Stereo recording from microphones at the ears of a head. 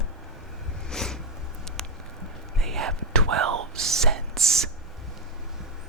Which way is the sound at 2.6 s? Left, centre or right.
Right.